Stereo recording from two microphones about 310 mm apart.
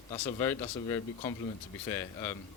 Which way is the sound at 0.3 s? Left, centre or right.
Centre.